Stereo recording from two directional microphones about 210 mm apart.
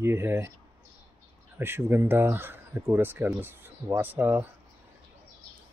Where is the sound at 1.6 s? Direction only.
10° right (ahead or behind).